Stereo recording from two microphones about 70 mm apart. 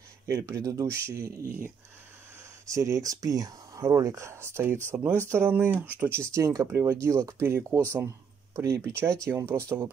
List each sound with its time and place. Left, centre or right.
0.3 s speech: right
2.7 s speech: right
6.0 s speech: right